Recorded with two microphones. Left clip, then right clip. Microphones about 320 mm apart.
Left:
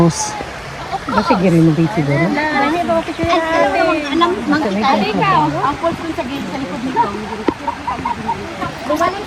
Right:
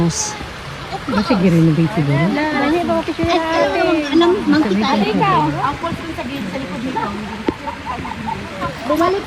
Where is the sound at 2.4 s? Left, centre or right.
Left.